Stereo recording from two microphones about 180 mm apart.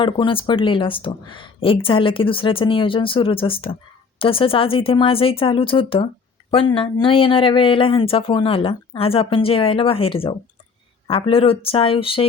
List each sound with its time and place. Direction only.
0.0 s speech: 30° left (ahead or behind)